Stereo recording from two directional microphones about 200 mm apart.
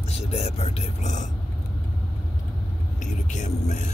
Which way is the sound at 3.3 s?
35° left (ahead or behind).